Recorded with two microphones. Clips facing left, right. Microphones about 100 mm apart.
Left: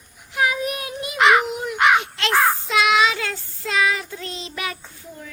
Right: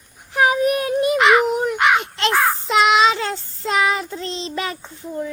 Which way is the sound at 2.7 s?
30° right (ahead or behind).